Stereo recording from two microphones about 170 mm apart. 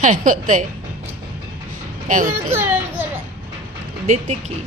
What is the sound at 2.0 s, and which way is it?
Speech, 50° right (ahead or behind).